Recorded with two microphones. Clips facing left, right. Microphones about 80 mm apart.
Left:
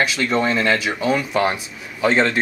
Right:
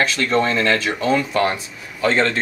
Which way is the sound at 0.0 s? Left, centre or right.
Centre.